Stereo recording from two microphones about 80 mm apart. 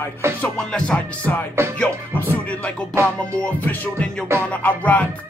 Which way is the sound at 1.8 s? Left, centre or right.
Left.